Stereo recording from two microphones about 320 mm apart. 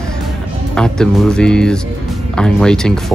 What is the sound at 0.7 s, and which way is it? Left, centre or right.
Speech, centre.